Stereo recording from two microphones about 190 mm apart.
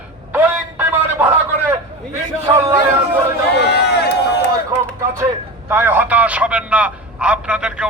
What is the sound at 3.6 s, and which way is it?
Run, 60° left (ahead or behind).